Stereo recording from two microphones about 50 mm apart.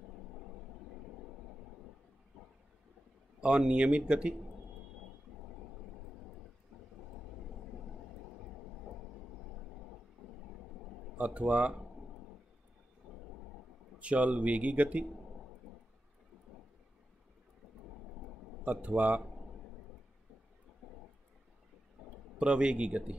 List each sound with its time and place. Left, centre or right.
3.3 s a man's voice: centre
11.1 s speech: right
13.9 s a man's voice: right
18.7 s speech: right
20.8 s a sound: centre
22.4 s a man's voice: centre